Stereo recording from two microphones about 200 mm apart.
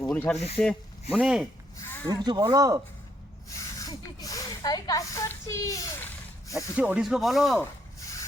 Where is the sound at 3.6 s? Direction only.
15° left (ahead or behind).